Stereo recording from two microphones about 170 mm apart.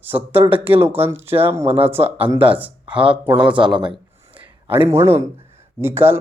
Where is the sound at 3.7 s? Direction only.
30° right (ahead or behind).